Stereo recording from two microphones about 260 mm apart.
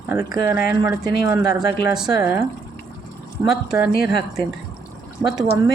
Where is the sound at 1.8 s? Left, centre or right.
Centre.